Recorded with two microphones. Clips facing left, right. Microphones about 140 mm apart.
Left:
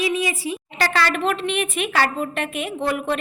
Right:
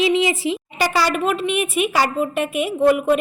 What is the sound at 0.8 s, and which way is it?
A woman's voice, 10° right (ahead or behind).